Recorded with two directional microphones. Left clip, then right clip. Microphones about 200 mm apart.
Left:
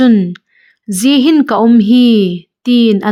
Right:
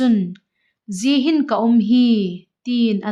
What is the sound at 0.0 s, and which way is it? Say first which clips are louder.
A woman's voice: left 8 dB; 20° left (ahead or behind).